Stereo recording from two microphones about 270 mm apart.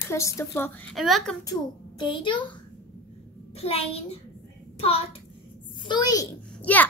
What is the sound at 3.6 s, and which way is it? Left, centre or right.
A child's voice, left.